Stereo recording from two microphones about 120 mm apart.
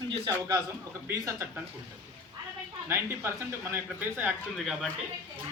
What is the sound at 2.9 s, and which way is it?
A woman's voice, 20° right (ahead or behind).